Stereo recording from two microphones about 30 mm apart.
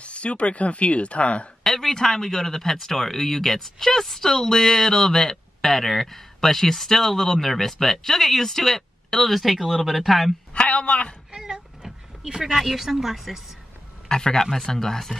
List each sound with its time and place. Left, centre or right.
0.0 s speech: left
1.6 s speech: centre
10.5 s a sound: left
11.3 s cat: right
12.3 s speech: right
12.5 s speech: centre
14.0 s speech: left